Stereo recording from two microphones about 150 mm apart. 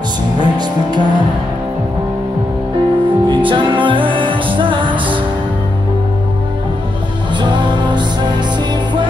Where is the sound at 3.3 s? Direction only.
35° right (ahead or behind).